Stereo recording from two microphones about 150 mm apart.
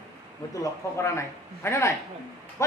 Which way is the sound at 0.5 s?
20° left (ahead or behind).